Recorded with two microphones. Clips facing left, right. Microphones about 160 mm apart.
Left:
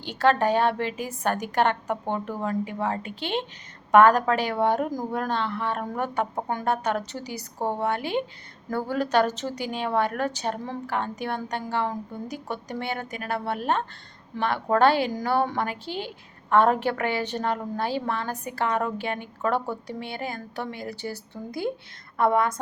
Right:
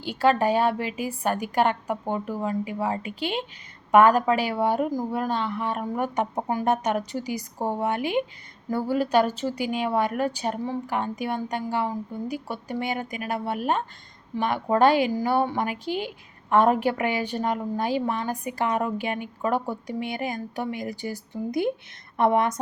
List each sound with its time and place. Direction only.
0.0 s a woman's voice: 10° right (ahead or behind)